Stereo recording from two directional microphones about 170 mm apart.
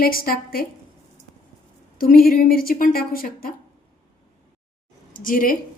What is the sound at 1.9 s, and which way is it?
A woman's voice, 60° left (ahead or behind).